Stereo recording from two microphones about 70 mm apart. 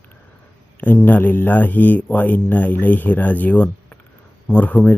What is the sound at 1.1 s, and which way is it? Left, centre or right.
Speech, left.